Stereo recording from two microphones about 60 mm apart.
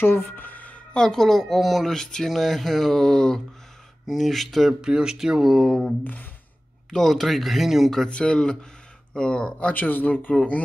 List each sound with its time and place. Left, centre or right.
0.0 s a sound: left
0.9 s speech: centre
4.8 s speech: centre
5.6 s speech: centre
8.1 s speech: centre